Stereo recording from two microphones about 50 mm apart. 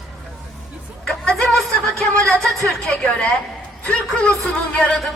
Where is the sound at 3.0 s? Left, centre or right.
Left.